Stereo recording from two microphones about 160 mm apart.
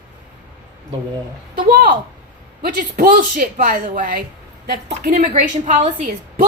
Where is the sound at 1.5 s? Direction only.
80° right; by 4.2 s 60° right (ahead or behind).